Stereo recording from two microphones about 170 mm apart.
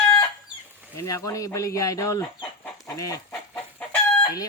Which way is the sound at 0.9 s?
20° left (ahead or behind).